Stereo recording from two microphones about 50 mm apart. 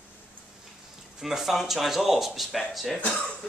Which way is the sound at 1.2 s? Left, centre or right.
Centre.